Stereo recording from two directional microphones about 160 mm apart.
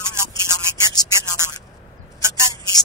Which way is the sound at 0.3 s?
25° left (ahead or behind).